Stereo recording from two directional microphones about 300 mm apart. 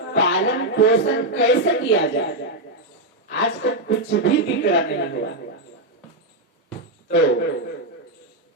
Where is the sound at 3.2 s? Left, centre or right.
Left.